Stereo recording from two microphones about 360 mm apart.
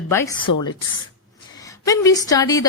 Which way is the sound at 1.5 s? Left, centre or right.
Centre.